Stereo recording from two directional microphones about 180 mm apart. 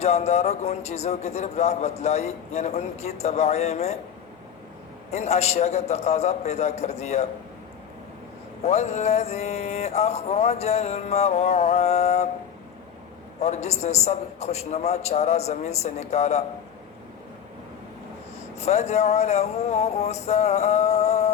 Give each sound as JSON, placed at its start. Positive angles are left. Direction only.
{"t": 0.0, "sound": "a man's voice", "side_deg": 35}
{"t": 5.1, "sound": "a man's voice", "side_deg": 35}
{"t": 8.6, "sound": "a man's voice", "side_deg": 35}
{"t": 13.4, "sound": "a man's voice", "side_deg": 35}
{"t": 18.6, "sound": "a man's voice", "side_deg": 40}